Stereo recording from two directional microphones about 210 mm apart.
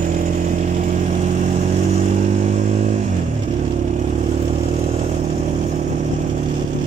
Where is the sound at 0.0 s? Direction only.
35° right (ahead or behind).